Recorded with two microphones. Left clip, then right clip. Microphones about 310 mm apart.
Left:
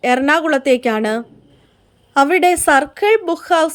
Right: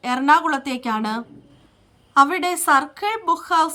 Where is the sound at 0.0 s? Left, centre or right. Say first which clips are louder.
Left 3 dB; centre.